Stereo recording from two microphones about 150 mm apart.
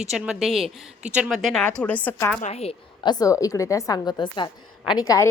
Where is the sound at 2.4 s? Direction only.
45° left (ahead or behind).